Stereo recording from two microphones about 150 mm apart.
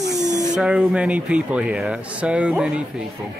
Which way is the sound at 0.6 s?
5° right (ahead or behind).